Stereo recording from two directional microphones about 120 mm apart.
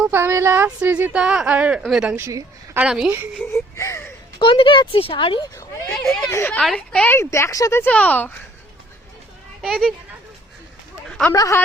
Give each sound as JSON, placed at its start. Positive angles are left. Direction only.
{"t": 0.1, "sound": "a woman's voice", "side_deg": -20}
{"t": 2.1, "sound": "a woman's voice", "side_deg": -25}
{"t": 2.7, "sound": "a woman's voice", "side_deg": -5}
{"t": 3.5, "sound": "a sound", "side_deg": 25}
{"t": 4.4, "sound": "speech", "side_deg": 45}
{"t": 5.8, "sound": "speech", "side_deg": 5}
{"t": 6.3, "sound": "a woman's voice", "side_deg": 15}
{"t": 7.9, "sound": "speech", "side_deg": 10}
{"t": 9.6, "sound": "a child's voice", "side_deg": 0}
{"t": 11.3, "sound": "a woman's voice", "side_deg": 25}